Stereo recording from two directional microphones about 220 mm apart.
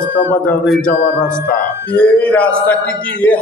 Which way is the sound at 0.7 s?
5° left (ahead or behind).